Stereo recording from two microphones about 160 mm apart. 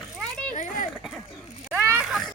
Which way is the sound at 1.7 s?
10° right (ahead or behind).